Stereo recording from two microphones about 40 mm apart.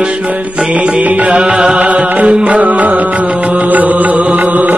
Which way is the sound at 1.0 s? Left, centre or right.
Right.